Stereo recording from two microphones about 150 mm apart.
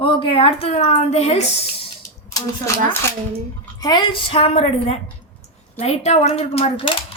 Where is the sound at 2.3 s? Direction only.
20° left (ahead or behind); by 7.0 s 35° left (ahead or behind).